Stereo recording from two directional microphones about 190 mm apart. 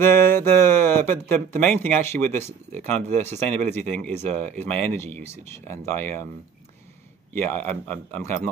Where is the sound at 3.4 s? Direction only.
5° left (ahead or behind).